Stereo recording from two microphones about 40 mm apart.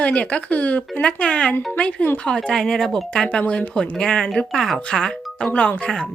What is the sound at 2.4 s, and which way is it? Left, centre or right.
Speech, centre.